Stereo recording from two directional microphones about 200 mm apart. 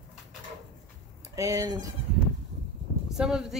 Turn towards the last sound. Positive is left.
turn(degrees=-5)  # may be behind; listen again after turning